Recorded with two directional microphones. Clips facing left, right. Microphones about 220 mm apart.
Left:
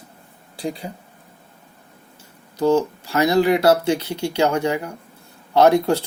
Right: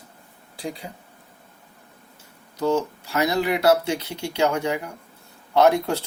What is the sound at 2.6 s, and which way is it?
Speech, 30° left (ahead or behind).